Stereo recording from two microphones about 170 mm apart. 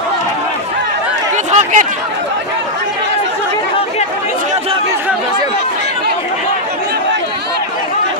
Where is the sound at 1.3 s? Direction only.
45° right (ahead or behind).